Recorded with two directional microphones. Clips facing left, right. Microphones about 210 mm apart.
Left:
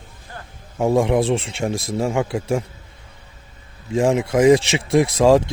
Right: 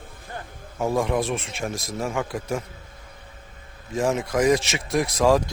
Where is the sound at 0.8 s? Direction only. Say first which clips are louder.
Left 6 dB; 25° left (ahead or behind).